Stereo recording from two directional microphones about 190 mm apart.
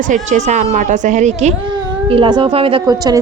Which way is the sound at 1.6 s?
25° right (ahead or behind).